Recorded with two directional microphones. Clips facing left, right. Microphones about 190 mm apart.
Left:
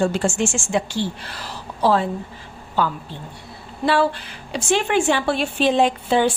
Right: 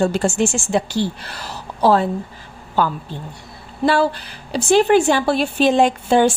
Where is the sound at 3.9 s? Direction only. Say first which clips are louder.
Right 2 dB; 40° right (ahead or behind).